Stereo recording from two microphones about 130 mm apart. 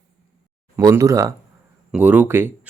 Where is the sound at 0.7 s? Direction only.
25° right (ahead or behind).